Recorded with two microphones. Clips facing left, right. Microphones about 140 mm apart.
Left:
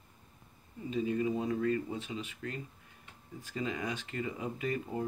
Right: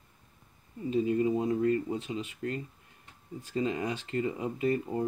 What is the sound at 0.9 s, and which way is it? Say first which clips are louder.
Speech: right 5 dB; 35° right (ahead or behind).